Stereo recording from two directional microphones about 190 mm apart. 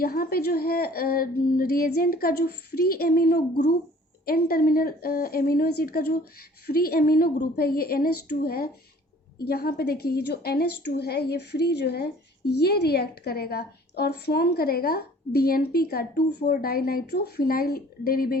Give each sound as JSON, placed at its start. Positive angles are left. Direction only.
{"t": 0.0, "sound": "a woman's voice", "side_deg": 50}